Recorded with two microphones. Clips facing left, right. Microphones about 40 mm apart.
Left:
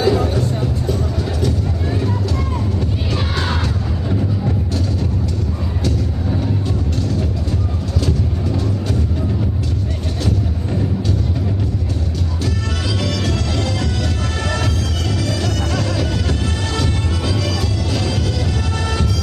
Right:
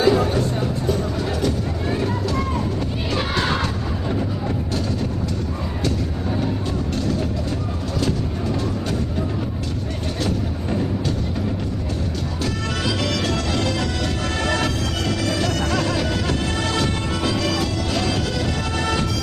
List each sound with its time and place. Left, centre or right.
0.0 s music: centre
3.2 s music: centre
12.8 s music: centre